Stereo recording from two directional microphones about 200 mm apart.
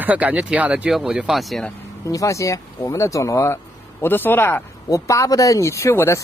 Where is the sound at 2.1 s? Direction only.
15° left (ahead or behind).